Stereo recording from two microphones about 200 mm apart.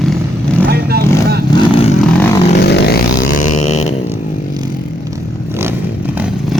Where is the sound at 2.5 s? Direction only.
55° left (ahead or behind).